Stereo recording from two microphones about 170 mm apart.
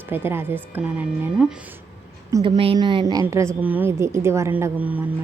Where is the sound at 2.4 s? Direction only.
30° right (ahead or behind).